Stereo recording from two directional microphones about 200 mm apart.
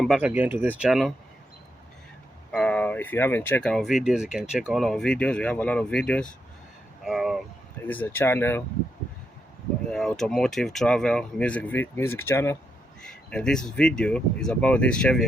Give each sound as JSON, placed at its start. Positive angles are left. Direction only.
{"t": 0.0, "sound": "speech", "side_deg": -5}
{"t": 2.5, "sound": "speech", "side_deg": 5}
{"t": 7.9, "sound": "speech", "side_deg": 10}
{"t": 9.9, "sound": "speech", "side_deg": 0}